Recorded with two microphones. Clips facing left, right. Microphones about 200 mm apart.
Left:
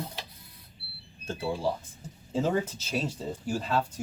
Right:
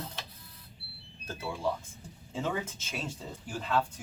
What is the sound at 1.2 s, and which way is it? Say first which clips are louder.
Speech: left 4 dB; 30° left (ahead or behind).